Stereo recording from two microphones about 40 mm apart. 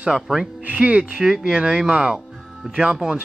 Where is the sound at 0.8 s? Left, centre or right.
Right.